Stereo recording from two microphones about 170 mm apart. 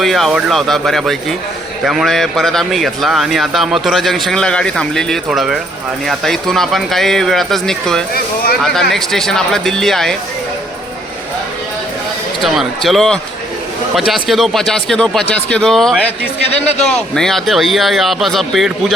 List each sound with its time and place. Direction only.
0.0 s speech: centre (ahead or behind)
12.4 s speech: centre (ahead or behind)
16.5 s a man's voice: 40° left (ahead or behind)
16.9 s speech: 5° left (ahead or behind)